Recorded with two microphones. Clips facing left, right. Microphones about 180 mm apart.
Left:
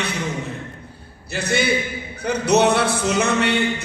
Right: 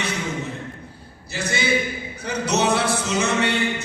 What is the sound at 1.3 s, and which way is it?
A man's voice, 60° left (ahead or behind).